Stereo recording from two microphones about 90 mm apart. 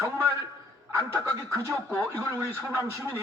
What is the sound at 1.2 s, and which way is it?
Speech, 30° right (ahead or behind).